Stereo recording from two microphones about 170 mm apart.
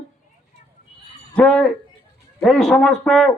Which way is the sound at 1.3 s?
5° left (ahead or behind).